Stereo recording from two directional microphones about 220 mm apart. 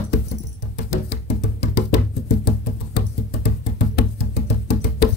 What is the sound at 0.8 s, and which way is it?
Music, 50° left (ahead or behind).